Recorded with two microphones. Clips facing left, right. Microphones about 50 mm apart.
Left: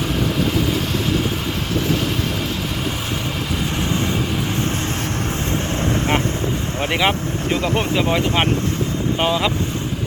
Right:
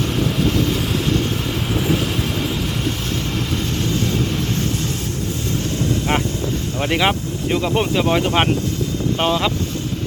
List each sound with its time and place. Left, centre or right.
3.8 s vehicle: left
6.7 s boat: centre
7.0 s speech: centre